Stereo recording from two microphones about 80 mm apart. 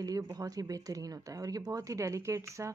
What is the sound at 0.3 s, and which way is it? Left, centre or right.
Speech, right.